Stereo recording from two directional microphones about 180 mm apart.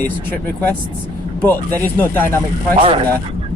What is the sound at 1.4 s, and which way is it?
Speech, 10° left (ahead or behind).